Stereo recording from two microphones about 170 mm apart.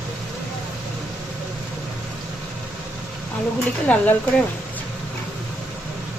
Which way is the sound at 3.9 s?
5° left (ahead or behind).